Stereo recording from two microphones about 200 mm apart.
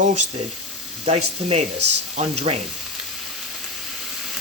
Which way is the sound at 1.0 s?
30° right (ahead or behind).